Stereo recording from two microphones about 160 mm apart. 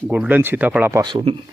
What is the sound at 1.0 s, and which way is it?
Speech, 30° right (ahead or behind).